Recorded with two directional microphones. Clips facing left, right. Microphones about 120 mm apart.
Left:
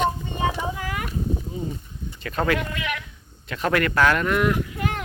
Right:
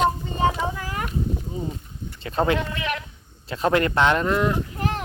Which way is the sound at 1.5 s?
30° right (ahead or behind).